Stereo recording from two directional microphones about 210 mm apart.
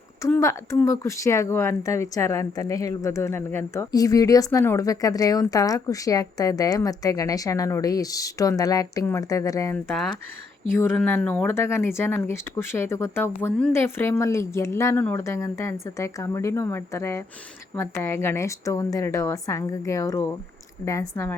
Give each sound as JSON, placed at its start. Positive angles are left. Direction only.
{"t": 0.2, "sound": "speech", "side_deg": 15}
{"t": 9.9, "sound": "speech", "side_deg": 5}